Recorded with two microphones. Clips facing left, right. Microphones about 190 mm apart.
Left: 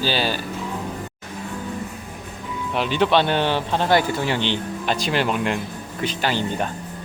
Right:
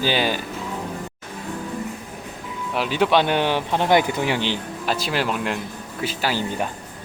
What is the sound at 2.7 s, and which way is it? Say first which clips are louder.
Speech: even; 5° right (ahead or behind).